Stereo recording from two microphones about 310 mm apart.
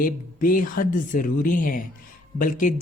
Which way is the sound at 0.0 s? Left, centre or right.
Left.